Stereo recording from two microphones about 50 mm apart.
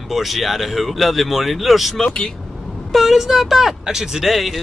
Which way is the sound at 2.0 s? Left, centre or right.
Centre.